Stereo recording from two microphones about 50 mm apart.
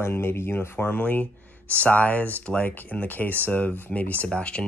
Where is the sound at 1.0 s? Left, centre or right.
Left.